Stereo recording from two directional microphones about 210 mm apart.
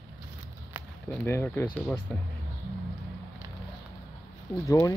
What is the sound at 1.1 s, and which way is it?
Speech, 10° left (ahead or behind).